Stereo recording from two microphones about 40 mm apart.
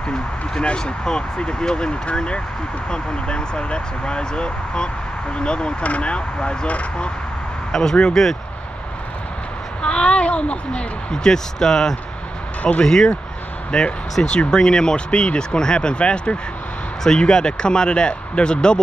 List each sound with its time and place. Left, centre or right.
0.6 s speech: left
7.7 s speech: centre
9.8 s speech: left